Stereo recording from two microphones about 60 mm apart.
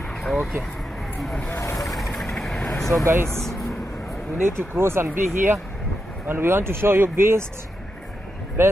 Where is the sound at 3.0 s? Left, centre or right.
Right.